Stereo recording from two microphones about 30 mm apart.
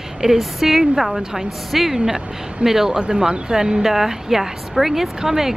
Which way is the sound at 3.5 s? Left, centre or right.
Centre.